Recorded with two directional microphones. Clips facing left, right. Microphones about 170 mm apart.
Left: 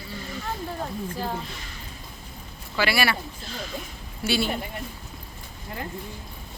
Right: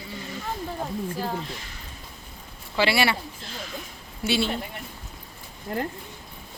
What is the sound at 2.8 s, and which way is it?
Speech, 25° right (ahead or behind).